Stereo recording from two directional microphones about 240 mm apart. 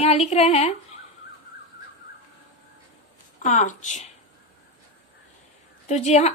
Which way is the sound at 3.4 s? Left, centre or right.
Left.